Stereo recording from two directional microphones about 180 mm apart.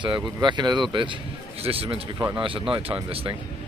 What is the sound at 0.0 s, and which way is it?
Speech, 25° right (ahead or behind).